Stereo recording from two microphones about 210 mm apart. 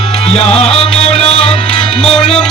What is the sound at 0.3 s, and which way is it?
Music, 30° left (ahead or behind).